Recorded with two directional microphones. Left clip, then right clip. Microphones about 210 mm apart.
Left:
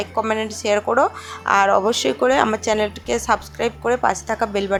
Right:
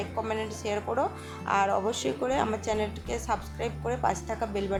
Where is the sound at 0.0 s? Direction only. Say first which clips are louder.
Left 10 dB; 20° left (ahead or behind).